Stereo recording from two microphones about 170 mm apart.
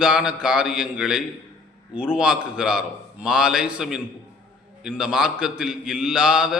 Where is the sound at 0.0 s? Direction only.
5° right (ahead or behind).